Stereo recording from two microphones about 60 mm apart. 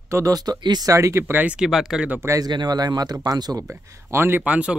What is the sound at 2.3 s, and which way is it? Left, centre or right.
Speech, right.